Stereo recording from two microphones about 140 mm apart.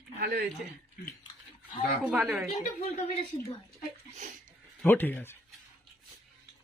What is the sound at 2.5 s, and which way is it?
Speech, 55° left (ahead or behind).